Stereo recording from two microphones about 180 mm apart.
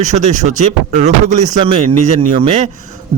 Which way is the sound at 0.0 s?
40° right (ahead or behind).